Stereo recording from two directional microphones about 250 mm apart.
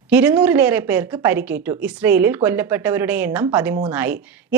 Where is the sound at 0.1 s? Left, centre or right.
Centre.